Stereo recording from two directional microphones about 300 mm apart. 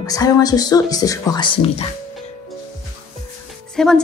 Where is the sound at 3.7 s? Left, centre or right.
Centre.